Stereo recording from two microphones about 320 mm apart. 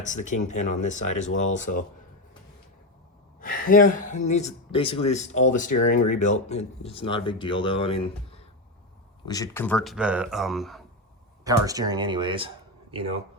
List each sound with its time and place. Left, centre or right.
0.0 s speech: left
3.4 s speech: left; by 10.8 s centre
11.4 s speech: centre